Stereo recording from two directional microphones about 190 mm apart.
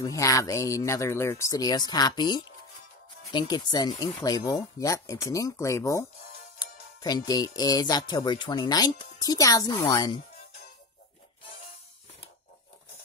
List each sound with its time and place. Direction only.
0.0 s speech: 15° left (ahead or behind)